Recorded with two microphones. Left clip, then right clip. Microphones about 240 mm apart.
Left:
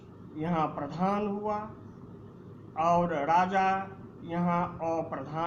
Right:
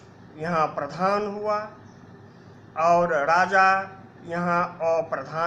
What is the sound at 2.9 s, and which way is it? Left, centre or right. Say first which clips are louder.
Speech: right 6 dB; centre.